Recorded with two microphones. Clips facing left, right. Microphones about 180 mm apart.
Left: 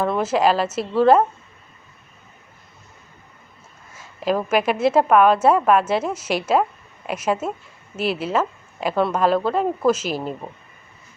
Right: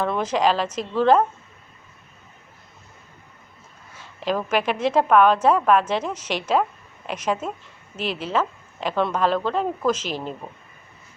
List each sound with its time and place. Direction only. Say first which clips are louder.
0.0 s a woman's voice: left 2 dB; 5° left (ahead or behind)
4.3 s a woman's voice: left 3 dB; 10° left (ahead or behind)